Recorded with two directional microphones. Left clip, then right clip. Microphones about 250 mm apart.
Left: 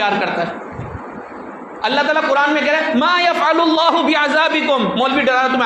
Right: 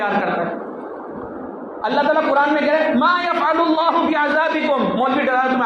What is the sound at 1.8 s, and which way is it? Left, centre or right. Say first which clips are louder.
Speech: left 1 dB; left.